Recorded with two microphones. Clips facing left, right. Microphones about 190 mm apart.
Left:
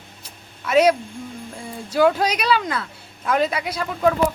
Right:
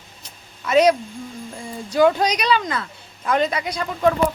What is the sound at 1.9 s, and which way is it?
A woman's voice, 5° left (ahead or behind).